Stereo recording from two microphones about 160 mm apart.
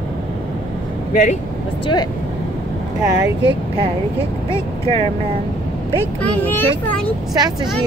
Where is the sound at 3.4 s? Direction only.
30° right (ahead or behind).